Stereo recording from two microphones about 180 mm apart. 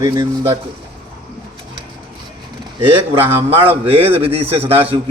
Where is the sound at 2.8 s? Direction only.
30° right (ahead or behind).